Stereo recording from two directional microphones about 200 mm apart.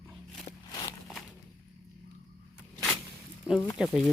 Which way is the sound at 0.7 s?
20° left (ahead or behind).